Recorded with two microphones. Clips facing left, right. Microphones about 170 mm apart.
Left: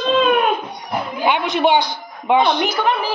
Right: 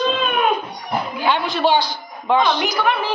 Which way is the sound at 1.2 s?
20° left (ahead or behind).